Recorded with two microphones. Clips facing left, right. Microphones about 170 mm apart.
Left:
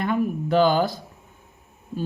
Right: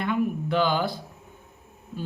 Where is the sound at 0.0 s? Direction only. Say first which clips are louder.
Left 2 dB; 40° left (ahead or behind).